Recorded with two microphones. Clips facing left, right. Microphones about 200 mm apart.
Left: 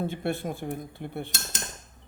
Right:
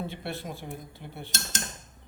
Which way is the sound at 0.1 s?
50° left (ahead or behind).